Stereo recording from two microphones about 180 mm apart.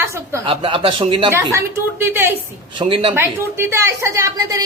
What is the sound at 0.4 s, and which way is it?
Speech, 30° right (ahead or behind).